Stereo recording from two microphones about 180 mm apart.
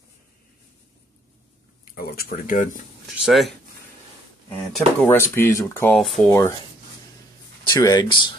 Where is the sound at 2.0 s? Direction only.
55° left (ahead or behind).